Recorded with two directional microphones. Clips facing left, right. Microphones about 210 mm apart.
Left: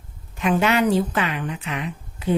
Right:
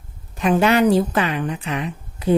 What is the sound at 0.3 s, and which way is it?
A woman's voice, 35° right (ahead or behind).